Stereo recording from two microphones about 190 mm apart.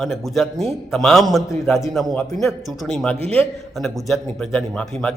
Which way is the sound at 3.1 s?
30° right (ahead or behind).